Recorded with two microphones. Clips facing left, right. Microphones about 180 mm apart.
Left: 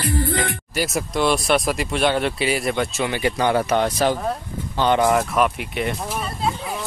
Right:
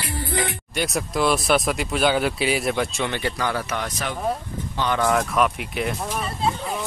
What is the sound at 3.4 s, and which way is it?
Speech, 25° left (ahead or behind).